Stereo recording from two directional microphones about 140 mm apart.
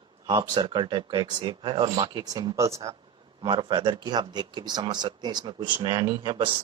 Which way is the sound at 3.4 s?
35° right (ahead or behind).